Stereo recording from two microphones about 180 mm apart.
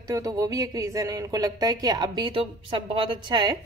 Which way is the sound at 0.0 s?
20° right (ahead or behind).